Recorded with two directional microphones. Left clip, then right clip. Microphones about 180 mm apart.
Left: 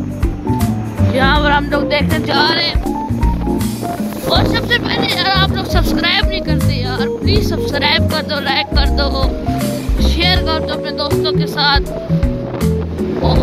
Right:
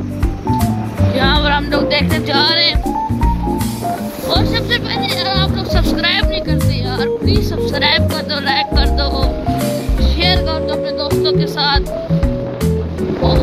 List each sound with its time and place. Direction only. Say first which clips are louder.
1.1 s music: left 2 dB; 10° left (ahead or behind)
5.1 s speech: left 4 dB; 20° left (ahead or behind)
6.5 s music: even; 15° left (ahead or behind)
8.5 s speech: right 2 dB; 15° left (ahead or behind)
10.2 s speech: even; 10° left (ahead or behind)